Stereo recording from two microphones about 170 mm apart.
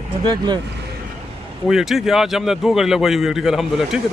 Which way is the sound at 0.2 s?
25° right (ahead or behind).